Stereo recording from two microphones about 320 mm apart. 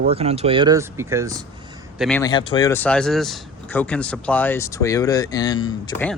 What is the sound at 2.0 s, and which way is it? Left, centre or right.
Speech, centre.